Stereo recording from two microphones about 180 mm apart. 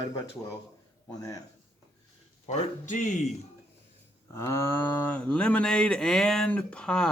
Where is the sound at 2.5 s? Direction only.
45° left (ahead or behind).